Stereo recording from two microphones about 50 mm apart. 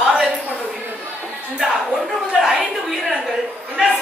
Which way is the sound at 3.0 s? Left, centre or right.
Centre.